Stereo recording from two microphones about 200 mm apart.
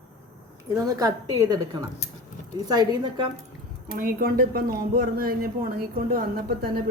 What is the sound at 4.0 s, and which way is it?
Speech, 45° right (ahead or behind).